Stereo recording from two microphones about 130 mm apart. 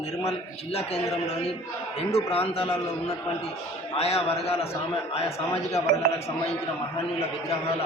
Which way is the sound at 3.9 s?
50° left (ahead or behind).